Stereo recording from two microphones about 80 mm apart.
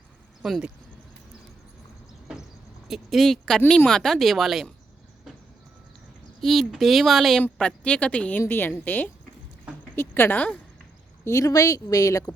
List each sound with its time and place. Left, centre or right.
0.4 s speech: centre
2.8 s speech: centre
6.4 s speech: centre
7.6 s speech: centre
8.4 s a woman's voice: left
11.3 s speech: left